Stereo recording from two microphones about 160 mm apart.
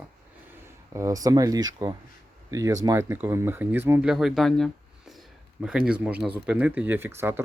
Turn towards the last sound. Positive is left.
turn(degrees=-15)  # may be behind; listen again after turning